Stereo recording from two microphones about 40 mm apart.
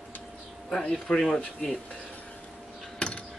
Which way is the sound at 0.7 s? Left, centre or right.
Left.